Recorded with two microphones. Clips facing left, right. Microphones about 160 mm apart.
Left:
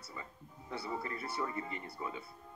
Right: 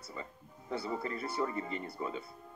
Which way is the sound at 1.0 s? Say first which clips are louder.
Right 4 dB; 30° right (ahead or behind).